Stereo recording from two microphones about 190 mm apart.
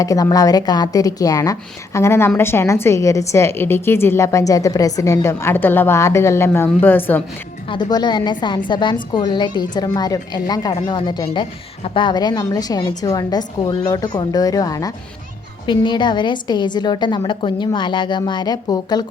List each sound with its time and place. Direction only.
0.0 s a woman's voice: 20° left (ahead or behind)
7.7 s a woman's voice: 20° left (ahead or behind)